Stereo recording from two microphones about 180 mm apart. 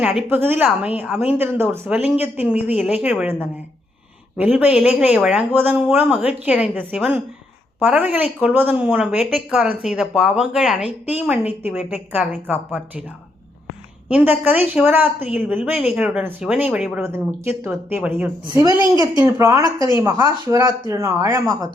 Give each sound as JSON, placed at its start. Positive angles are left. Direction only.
{"t": 0.0, "sound": "a woman's voice", "side_deg": -5}
{"t": 4.4, "sound": "a woman's voice", "side_deg": -10}
{"t": 14.1, "sound": "a woman's voice", "side_deg": -10}